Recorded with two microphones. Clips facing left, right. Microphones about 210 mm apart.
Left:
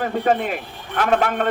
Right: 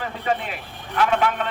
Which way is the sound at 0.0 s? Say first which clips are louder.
Left 6 dB; 45° left (ahead or behind).